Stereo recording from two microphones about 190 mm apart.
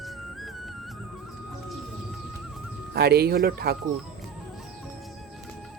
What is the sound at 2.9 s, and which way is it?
Speech, 55° right (ahead or behind).